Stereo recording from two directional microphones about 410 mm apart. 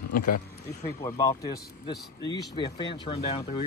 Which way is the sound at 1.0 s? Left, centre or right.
Centre.